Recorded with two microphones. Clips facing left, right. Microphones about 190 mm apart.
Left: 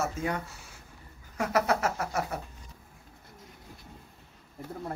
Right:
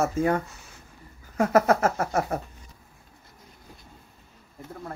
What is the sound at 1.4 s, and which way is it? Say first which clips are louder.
Speech: right 7 dB; 50° right (ahead or behind).